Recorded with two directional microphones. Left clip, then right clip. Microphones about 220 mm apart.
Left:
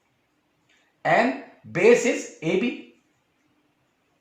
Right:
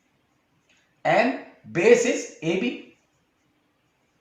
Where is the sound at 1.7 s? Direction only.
35° left (ahead or behind).